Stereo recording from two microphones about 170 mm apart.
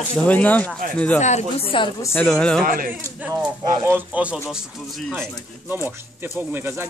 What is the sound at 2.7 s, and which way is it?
Speech, 55° right (ahead or behind).